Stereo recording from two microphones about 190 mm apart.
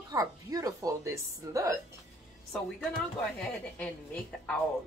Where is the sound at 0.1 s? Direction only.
20° right (ahead or behind).